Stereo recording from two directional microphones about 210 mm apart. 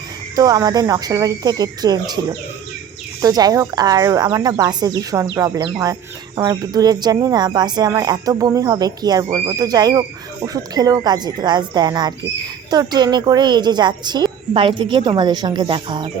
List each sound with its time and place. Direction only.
0.3 s a woman's voice: 20° right (ahead or behind)